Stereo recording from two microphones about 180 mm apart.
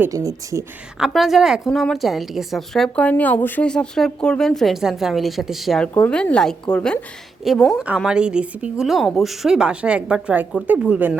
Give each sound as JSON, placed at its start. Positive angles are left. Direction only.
{"t": 0.0, "sound": "speech", "side_deg": -20}
{"t": 0.9, "sound": "a woman's voice", "side_deg": 0}